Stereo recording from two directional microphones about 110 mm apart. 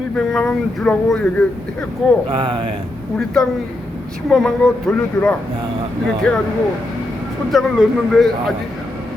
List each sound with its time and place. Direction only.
0.2 s speech: centre (ahead or behind)
2.3 s speech: 50° right (ahead or behind)
3.4 s speech: 5° left (ahead or behind)
7.5 s speech: centre (ahead or behind)